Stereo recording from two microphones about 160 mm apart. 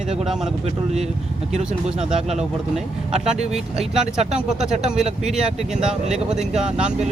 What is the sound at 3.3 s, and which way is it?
Speech, 40° right (ahead or behind).